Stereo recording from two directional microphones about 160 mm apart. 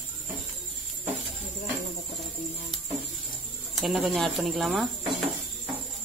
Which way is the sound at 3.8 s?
Centre (ahead or behind).